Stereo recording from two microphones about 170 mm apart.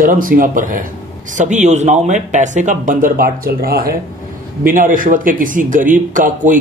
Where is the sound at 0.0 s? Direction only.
55° right (ahead or behind).